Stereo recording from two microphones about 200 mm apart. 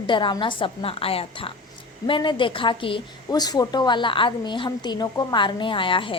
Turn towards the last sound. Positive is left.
turn(degrees=25)  # may be behind; listen again after turning